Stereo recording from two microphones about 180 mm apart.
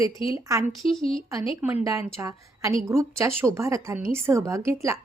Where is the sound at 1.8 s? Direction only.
15° right (ahead or behind).